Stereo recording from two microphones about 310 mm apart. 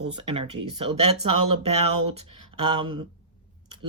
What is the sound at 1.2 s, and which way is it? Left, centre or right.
Speech, right.